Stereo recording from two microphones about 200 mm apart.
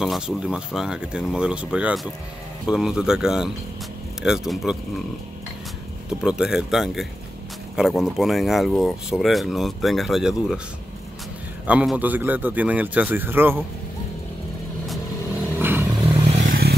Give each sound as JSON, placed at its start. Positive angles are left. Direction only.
{"t": 0.0, "sound": "speech", "side_deg": 0}
{"t": 6.2, "sound": "speech", "side_deg": -5}
{"t": 11.6, "sound": "a man's voice", "side_deg": -5}
{"t": 15.6, "sound": "vehicle", "side_deg": -10}
{"t": 16.4, "sound": "vehicle", "side_deg": -50}